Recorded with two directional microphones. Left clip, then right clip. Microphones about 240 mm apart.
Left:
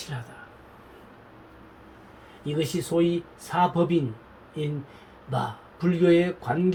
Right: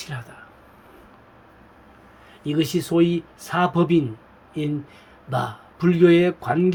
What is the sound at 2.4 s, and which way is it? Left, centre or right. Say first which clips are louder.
Speech: right 5 dB; right.